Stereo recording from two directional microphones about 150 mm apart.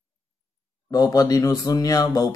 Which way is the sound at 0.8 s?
25° left (ahead or behind).